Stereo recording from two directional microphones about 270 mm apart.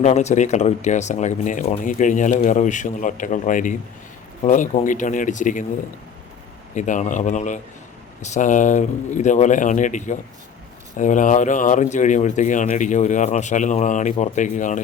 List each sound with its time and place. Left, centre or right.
0.0 s speech: left
6.7 s speech: left